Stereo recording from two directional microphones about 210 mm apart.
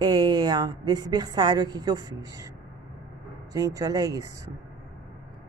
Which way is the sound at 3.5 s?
15° right (ahead or behind).